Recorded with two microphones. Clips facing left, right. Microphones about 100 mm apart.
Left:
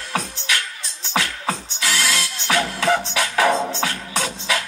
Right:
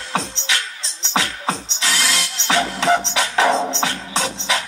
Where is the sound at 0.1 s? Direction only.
20° right (ahead or behind).